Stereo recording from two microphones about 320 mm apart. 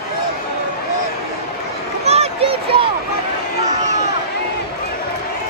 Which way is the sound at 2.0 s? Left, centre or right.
Centre.